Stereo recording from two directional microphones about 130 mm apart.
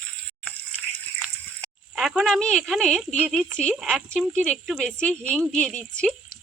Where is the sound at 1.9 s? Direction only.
Centre (ahead or behind).